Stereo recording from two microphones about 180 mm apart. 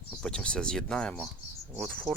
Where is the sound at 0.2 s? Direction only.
5° left (ahead or behind).